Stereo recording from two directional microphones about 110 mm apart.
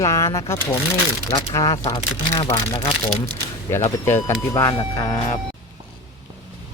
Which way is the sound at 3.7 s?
25° left (ahead or behind).